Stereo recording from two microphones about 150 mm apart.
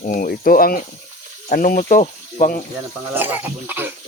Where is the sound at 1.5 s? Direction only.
65° left (ahead or behind).